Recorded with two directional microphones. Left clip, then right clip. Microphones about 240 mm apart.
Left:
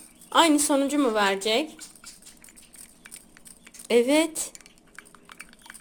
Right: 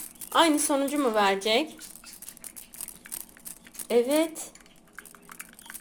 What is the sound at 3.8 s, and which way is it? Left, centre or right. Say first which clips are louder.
Speech: left 3 dB; left.